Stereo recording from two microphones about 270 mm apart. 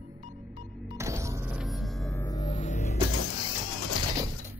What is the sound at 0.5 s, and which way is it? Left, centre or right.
Music, centre.